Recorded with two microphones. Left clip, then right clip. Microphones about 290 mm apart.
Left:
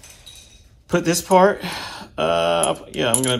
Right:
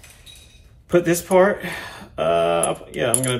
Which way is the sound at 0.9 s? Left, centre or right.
Centre.